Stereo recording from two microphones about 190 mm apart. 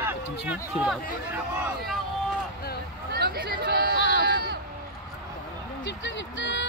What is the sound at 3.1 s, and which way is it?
Speech, 55° right (ahead or behind).